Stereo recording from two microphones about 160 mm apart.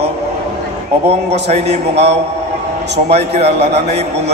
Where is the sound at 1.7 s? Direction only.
40° right (ahead or behind).